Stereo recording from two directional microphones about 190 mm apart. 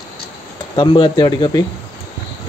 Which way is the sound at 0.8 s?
25° left (ahead or behind).